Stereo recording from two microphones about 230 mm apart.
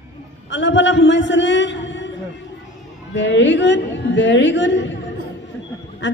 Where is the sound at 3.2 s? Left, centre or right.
Left.